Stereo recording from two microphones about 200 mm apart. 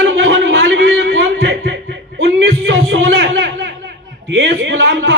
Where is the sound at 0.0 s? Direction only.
65° right (ahead or behind).